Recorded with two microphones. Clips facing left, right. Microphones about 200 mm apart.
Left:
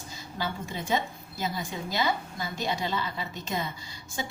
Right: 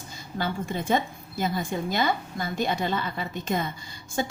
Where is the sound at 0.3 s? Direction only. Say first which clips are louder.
Right 5 dB; 55° right (ahead or behind).